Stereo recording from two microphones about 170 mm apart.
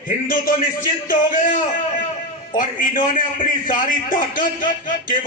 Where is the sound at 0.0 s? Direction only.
55° left (ahead or behind).